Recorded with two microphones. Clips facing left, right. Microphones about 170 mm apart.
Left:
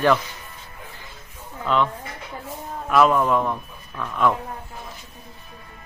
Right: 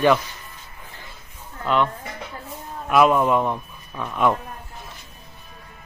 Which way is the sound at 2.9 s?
10° right (ahead or behind).